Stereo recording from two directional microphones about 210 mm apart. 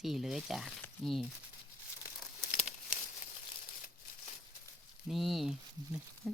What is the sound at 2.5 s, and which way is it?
Crumpling, 35° left (ahead or behind).